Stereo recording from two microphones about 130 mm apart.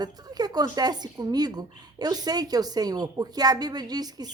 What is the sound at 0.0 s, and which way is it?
A woman's voice, 30° right (ahead or behind).